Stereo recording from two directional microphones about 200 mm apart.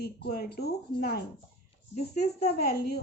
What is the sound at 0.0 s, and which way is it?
Speech, 50° left (ahead or behind).